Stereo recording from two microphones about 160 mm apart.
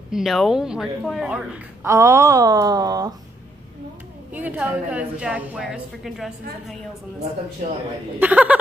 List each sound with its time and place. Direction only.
0.1 s a woman's voice: centre (ahead or behind)
1.9 s speech: 20° right (ahead or behind)
4.3 s a woman's voice: 10° right (ahead or behind)
8.2 s a woman's voice: 10° right (ahead or behind)